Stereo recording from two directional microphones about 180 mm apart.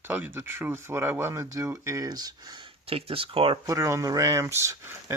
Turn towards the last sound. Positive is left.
turn(degrees=-15)  # may be behind; listen again after turning